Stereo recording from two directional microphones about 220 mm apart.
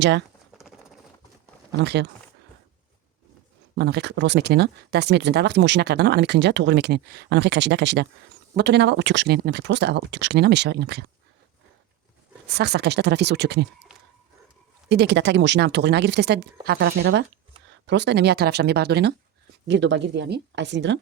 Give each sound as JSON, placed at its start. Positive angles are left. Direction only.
{"t": 1.8, "sound": "speech", "side_deg": -50}
{"t": 3.8, "sound": "speech", "side_deg": -50}
{"t": 12.5, "sound": "speech", "side_deg": -50}
{"t": 14.8, "sound": "speech", "side_deg": -50}